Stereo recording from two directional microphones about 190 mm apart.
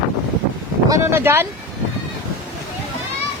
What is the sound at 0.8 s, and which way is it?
Speech, 15° right (ahead or behind).